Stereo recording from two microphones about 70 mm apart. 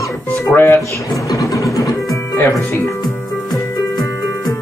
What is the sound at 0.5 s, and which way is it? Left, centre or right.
Speech, left.